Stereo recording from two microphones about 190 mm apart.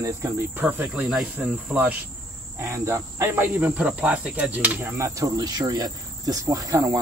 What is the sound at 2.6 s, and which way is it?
Cricket, 15° right (ahead or behind).